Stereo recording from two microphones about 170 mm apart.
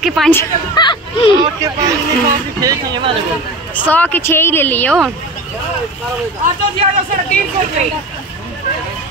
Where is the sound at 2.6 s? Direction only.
25° right (ahead or behind).